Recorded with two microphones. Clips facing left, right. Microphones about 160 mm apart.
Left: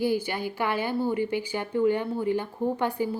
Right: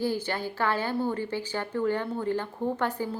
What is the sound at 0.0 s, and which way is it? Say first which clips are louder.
A woman's voice: left 3 dB; 10° left (ahead or behind).